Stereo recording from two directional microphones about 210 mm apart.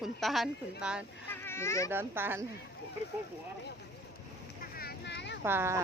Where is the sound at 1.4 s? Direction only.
10° left (ahead or behind).